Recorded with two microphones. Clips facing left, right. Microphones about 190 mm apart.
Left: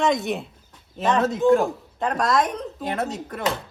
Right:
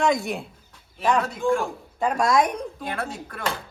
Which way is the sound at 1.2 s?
20° left (ahead or behind).